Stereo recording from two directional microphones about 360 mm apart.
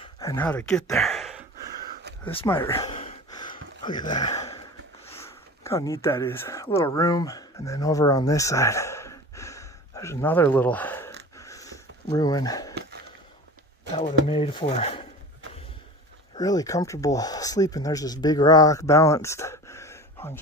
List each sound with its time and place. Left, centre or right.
0.0 s speech: centre
2.2 s a sound: centre
3.8 s speech: centre
11.3 s sniff: centre
14.3 s speech: centre
16.3 s speech: centre